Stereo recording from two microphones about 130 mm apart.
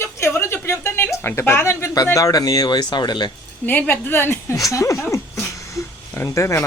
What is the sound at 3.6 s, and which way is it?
Speech, 15° left (ahead or behind).